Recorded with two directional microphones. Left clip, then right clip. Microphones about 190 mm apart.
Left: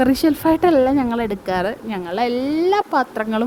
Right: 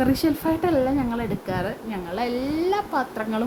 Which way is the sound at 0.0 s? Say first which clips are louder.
Left 6 dB; 35° left (ahead or behind).